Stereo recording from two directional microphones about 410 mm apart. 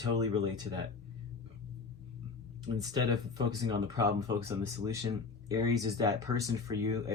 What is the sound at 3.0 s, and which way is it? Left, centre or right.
Speech, centre.